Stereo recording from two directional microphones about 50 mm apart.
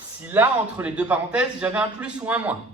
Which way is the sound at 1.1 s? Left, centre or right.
Right.